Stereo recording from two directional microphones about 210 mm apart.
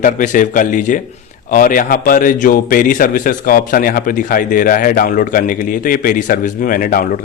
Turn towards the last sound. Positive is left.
turn(degrees=40)  # may be behind; listen again after turning